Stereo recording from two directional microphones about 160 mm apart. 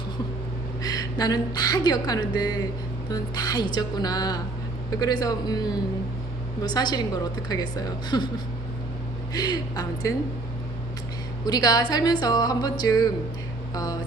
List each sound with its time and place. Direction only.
0.8 s a woman's voice: 25° left (ahead or behind)
6.7 s a woman's voice: 25° left (ahead or behind)
9.3 s a woman's voice: 25° left (ahead or behind)
11.4 s a woman's voice: 25° left (ahead or behind)